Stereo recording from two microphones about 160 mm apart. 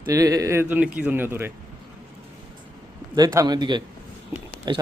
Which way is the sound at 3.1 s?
25° right (ahead or behind).